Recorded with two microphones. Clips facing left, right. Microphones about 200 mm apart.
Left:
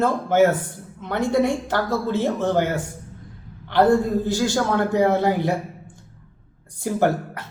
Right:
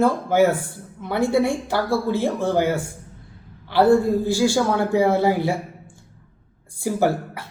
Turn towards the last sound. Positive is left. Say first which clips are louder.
# even
turn(degrees=-10)  # may be behind; listen again after turning